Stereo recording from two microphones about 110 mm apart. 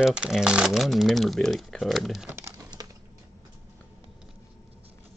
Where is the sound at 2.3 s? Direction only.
25° right (ahead or behind).